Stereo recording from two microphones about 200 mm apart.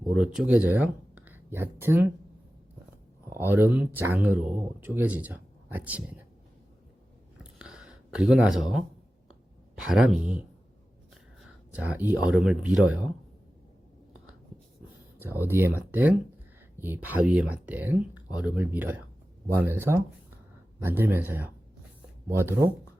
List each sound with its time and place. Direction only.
0.0 s speech: 5° right (ahead or behind)
3.2 s speech: 10° right (ahead or behind)
7.6 s a sound: 5° right (ahead or behind)
9.7 s speech: 5° right (ahead or behind)
11.7 s speech: 5° right (ahead or behind)
15.2 s speech: 10° right (ahead or behind)